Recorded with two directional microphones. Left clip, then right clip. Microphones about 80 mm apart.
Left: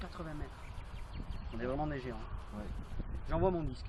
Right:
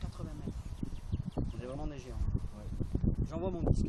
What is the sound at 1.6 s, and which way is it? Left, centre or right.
Speech, right.